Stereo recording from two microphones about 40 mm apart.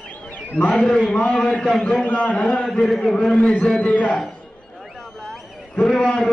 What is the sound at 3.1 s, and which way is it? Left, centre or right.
Speech, left.